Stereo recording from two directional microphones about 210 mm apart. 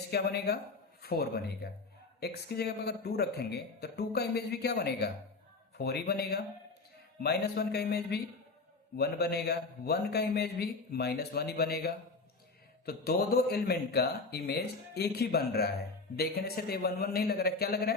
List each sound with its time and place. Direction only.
0.1 s a man's voice: 50° left (ahead or behind)